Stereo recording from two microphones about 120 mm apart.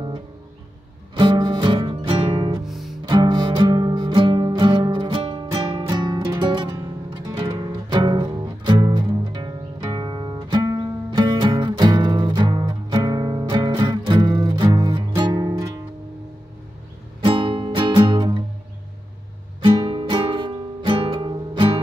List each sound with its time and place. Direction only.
1.1 s music: 35° right (ahead or behind)
2.6 s music: centre (ahead or behind)
3.1 s music: 35° right (ahead or behind)
17.2 s music: 45° right (ahead or behind)
19.6 s music: 45° right (ahead or behind)